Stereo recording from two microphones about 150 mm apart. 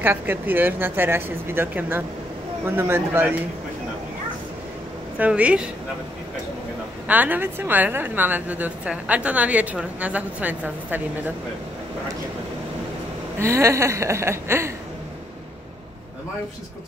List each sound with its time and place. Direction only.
0.0 s a woman's voice: 15° right (ahead or behind)
5.2 s a woman's voice: 10° right (ahead or behind)
7.1 s a woman's voice: 10° right (ahead or behind)
13.4 s a woman's voice: 20° right (ahead or behind)